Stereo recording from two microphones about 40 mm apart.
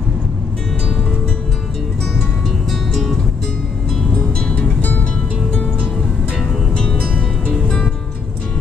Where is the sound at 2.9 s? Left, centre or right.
Centre.